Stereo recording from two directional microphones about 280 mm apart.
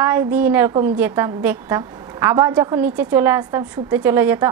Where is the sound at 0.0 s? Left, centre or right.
Centre.